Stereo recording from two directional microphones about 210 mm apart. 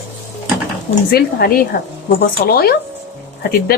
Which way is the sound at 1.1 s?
45° left (ahead or behind).